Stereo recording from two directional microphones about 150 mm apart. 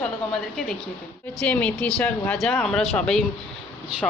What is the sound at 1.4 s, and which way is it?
A woman's voice, 10° left (ahead or behind).